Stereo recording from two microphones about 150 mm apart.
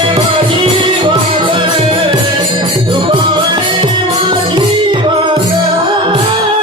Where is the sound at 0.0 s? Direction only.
35° right (ahead or behind).